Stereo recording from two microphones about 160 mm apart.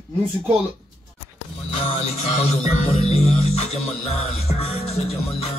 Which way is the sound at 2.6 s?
40° left (ahead or behind).